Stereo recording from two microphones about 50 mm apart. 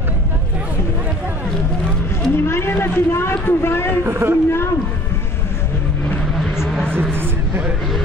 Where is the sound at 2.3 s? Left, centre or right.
Left.